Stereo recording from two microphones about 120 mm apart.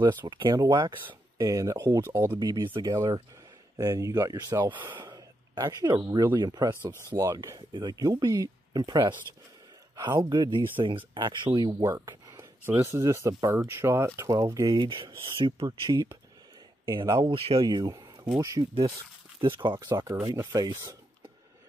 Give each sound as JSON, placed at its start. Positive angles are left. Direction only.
{"t": 0.0, "sound": "speech", "side_deg": -40}
{"t": 1.9, "sound": "speech", "side_deg": -20}
{"t": 2.4, "sound": "speech", "side_deg": -30}
{"t": 4.7, "sound": "speech", "side_deg": -15}
{"t": 5.0, "sound": "a sound", "side_deg": -35}
{"t": 6.3, "sound": "speech", "side_deg": -35}
{"t": 12.6, "sound": "speech", "side_deg": -20}
{"t": 14.7, "sound": "speech", "side_deg": -45}
{"t": 17.3, "sound": "speech", "side_deg": -45}
{"t": 17.6, "sound": "speech", "side_deg": -30}
{"t": 20.5, "sound": "speech", "side_deg": -30}